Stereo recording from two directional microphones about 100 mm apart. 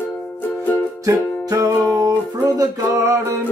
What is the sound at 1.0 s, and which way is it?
Music, 35° right (ahead or behind).